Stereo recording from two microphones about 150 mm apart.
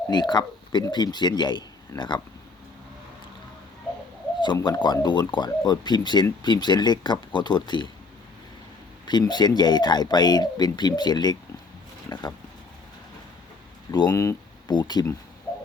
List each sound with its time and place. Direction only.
0.1 s speech: 30° left (ahead or behind)
4.6 s speech: 30° left (ahead or behind)
9.0 s speech: 30° left (ahead or behind)
12.0 s a sound: 25° left (ahead or behind)
14.1 s speech: 20° left (ahead or behind)